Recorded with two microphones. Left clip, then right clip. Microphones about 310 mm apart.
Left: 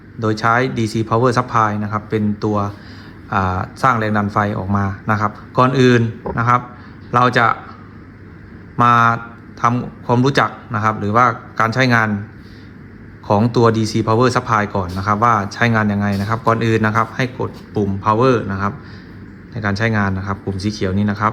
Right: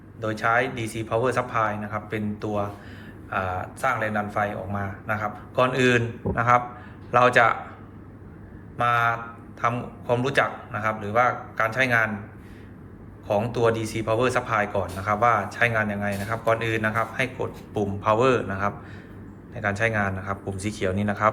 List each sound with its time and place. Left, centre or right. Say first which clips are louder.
0.2 s speech: left 7 dB; centre
8.8 s speech: left 9 dB; centre
13.2 s speech: left 8 dB; centre